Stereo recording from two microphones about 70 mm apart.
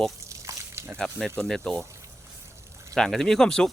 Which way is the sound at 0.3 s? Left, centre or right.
Right.